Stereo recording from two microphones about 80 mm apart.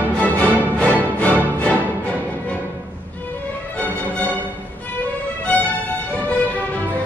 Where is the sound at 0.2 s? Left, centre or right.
Centre.